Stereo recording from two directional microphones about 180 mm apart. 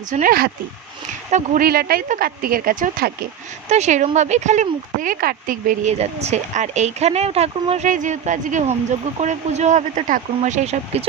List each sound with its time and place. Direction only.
0.1 s speech: 50° right (ahead or behind)
3.7 s speech: 40° right (ahead or behind)